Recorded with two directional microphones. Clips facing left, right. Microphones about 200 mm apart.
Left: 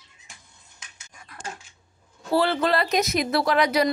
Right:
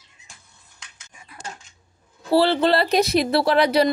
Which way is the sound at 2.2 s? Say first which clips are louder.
Right 4 dB; 30° right (ahead or behind).